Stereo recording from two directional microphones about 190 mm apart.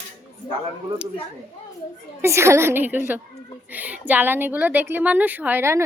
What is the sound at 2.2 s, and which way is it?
A woman's voice, 15° right (ahead or behind).